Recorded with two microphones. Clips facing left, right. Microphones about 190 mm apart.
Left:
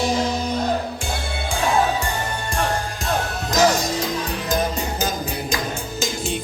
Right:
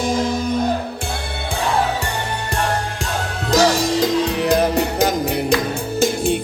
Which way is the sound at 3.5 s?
70° right (ahead or behind).